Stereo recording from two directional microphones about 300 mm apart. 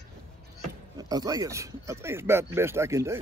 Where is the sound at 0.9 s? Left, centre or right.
Centre.